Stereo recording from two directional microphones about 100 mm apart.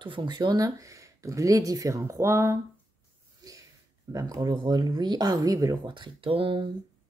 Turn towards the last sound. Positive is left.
turn(degrees=-60)  # may be behind; listen again after turning